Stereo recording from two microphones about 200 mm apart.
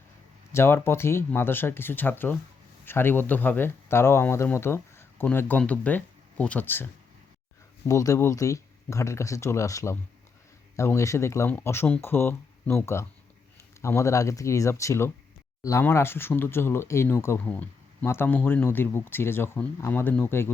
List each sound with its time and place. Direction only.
0.5 s speech: 10° left (ahead or behind)
7.9 s speech: 15° left (ahead or behind)